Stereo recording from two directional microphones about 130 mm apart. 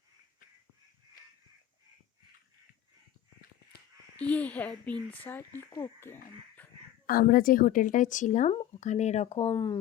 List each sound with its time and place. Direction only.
4.2 s speech: 10° left (ahead or behind)
6.6 s a sound: 10° left (ahead or behind)
7.1 s a woman's voice: 90° left; by 8.5 s 70° left (ahead or behind)
8.5 s speech: 60° left (ahead or behind)
9.5 s speech: 35° left (ahead or behind)